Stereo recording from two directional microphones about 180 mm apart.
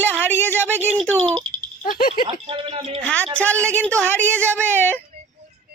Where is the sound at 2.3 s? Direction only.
30° right (ahead or behind).